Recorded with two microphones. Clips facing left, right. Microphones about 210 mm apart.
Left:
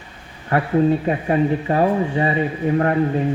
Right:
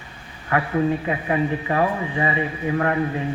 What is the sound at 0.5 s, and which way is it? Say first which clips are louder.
Speech: left 4 dB; 35° left (ahead or behind).